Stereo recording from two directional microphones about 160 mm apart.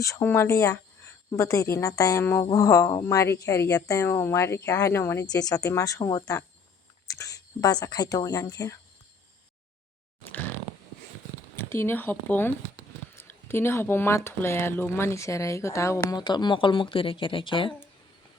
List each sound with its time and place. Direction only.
0.0 s speech: 15° left (ahead or behind)
11.7 s speech: 15° left (ahead or behind); by 17.7 s 30° left (ahead or behind)